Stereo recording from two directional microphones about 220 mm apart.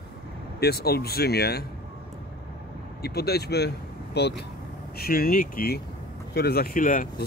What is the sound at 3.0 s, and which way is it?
Speech, 45° left (ahead or behind).